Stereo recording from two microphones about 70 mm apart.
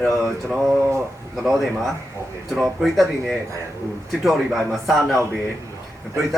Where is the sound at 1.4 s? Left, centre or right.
Centre.